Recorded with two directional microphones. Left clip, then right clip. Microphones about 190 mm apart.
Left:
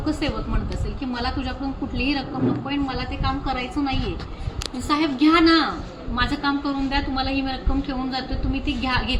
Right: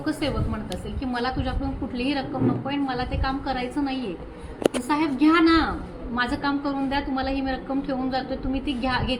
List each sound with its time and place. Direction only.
0.0 s a woman's voice: centre (ahead or behind)
2.0 s a woman's voice: 5° left (ahead or behind)